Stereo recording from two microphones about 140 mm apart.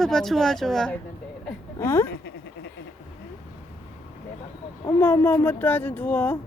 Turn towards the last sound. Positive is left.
turn(degrees=15)  # may be behind; listen again after turning